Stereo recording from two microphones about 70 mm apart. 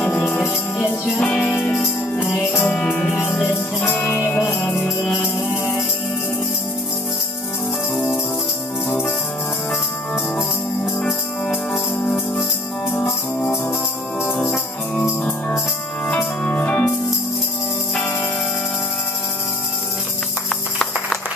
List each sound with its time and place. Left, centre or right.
0.1 s music: left
2.3 s music: left
4.0 s music: left
4.3 s music: left
11.0 s music: centre
14.2 s music: centre
16.2 s music: left